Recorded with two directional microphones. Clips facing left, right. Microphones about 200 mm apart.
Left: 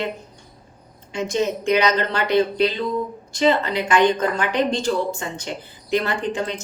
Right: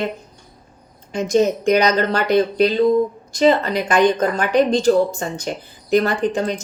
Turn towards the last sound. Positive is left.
turn(degrees=-40)  # may be behind; listen again after turning